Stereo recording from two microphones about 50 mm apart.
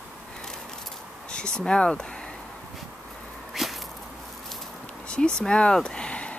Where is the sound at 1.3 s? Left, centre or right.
Centre.